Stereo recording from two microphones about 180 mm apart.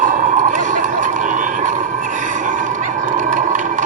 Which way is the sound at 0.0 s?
45° right (ahead or behind).